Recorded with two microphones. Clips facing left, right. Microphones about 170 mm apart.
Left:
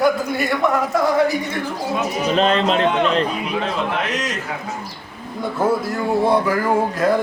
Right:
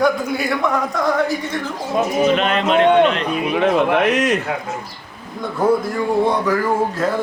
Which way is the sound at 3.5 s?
60° right (ahead or behind).